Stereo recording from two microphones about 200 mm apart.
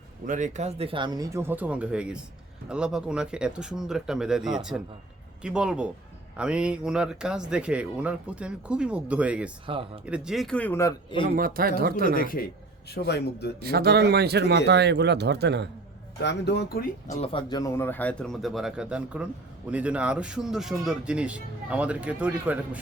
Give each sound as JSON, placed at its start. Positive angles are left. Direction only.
{"t": 0.3, "sound": "speech", "side_deg": -40}
{"t": 9.6, "sound": "speech", "side_deg": -25}
{"t": 10.1, "sound": "speech", "side_deg": 0}
{"t": 11.3, "sound": "speech", "side_deg": -45}
{"t": 12.1, "sound": "a man's voice", "side_deg": 45}
{"t": 13.6, "sound": "speech", "side_deg": -50}
{"t": 16.2, "sound": "a man's voice", "side_deg": 60}
{"t": 17.1, "sound": "speech", "side_deg": 30}
{"t": 17.5, "sound": "speech", "side_deg": 15}